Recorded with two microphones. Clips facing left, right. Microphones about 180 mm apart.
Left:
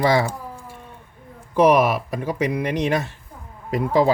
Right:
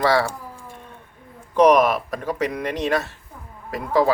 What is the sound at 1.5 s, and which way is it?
Speech, 10° left (ahead or behind).